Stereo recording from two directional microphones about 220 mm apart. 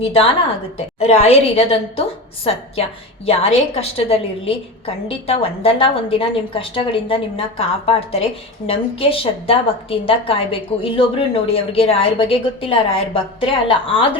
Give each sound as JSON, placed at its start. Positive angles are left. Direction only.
{"t": 0.0, "sound": "a woman's voice", "side_deg": 25}